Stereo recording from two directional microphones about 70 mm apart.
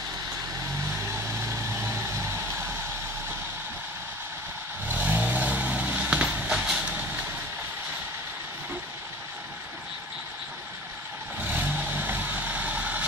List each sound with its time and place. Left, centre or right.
1.0 s vehicle: right
4.8 s vehicle: right
6.5 s vehicle: centre
11.4 s vehicle: right